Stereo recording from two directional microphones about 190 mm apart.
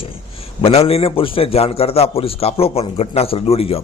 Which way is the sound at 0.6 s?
30° left (ahead or behind).